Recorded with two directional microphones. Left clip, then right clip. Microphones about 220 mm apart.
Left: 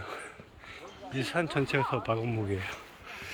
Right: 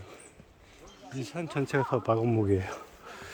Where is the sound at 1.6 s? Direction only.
30° right (ahead or behind).